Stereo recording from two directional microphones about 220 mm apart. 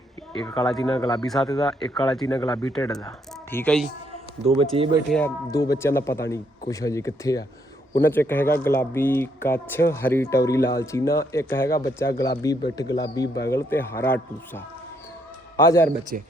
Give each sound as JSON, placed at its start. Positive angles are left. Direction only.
{"t": 0.3, "sound": "speech", "side_deg": 5}
{"t": 2.2, "sound": "speech", "side_deg": 15}
{"t": 3.5, "sound": "speech", "side_deg": 5}
{"t": 4.4, "sound": "speech", "side_deg": -25}
{"t": 5.1, "sound": "speech", "side_deg": 10}
{"t": 16.1, "sound": "speech", "side_deg": -35}